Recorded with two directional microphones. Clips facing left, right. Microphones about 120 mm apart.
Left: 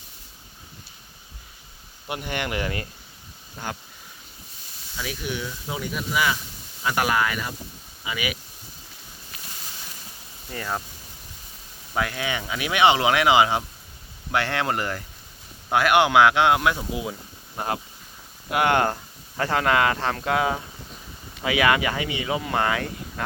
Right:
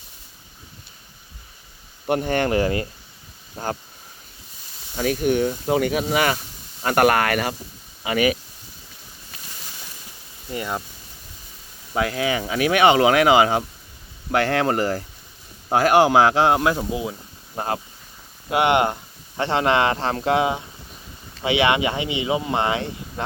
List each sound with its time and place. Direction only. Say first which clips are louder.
2.0 s speech: right 9 dB; 45° right (ahead or behind)
4.9 s speech: right 11 dB; 50° right (ahead or behind)
8.0 s speech: right 10 dB; 50° right (ahead or behind)
10.5 s speech: right 3 dB; 15° right (ahead or behind)
11.9 s speech: right 5 dB; 30° right (ahead or behind)